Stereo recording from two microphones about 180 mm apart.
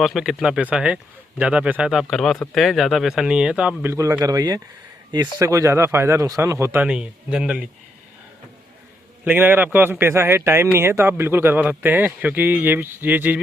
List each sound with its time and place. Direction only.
0.0 s speech: centre (ahead or behind)
3.9 s a man's voice: 15° right (ahead or behind)
9.2 s a man's voice: 10° right (ahead or behind)